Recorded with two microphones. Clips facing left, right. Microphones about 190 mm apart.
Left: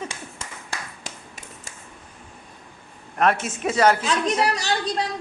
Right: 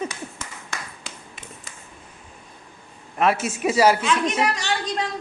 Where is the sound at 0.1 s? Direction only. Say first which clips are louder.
Right 2 dB; 30° left (ahead or behind).